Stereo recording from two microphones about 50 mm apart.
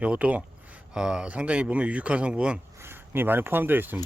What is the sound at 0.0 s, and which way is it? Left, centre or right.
Speech, right.